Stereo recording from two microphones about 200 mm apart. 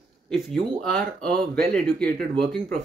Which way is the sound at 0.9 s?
5° left (ahead or behind).